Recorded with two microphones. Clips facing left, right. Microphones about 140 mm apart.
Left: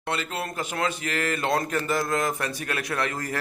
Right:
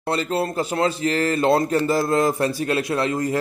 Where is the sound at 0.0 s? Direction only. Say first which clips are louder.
Right 7 dB; 35° right (ahead or behind).